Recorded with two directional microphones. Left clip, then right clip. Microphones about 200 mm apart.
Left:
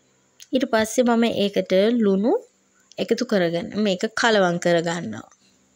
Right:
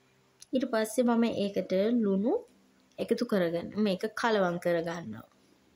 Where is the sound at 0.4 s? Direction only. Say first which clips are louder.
Left 9 dB; 30° left (ahead or behind).